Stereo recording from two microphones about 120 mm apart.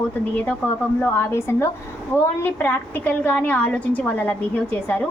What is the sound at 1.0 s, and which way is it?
A woman's voice, 20° left (ahead or behind).